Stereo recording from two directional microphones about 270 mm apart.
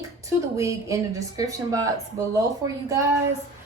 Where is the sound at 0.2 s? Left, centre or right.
Centre.